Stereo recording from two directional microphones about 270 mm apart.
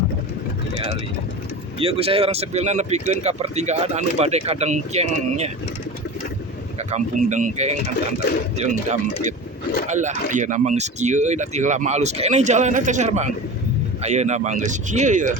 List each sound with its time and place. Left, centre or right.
1.8 s speech: right
6.7 s speech: right